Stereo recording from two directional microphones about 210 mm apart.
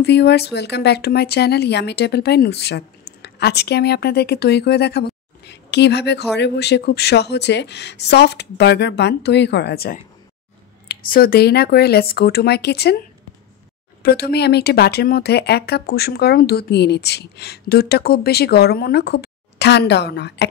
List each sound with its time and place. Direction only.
0.0 s speech: 55° left (ahead or behind)
14.0 s speech: 50° left (ahead or behind)